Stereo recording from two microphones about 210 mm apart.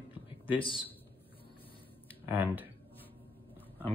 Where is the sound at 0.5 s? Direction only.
25° left (ahead or behind).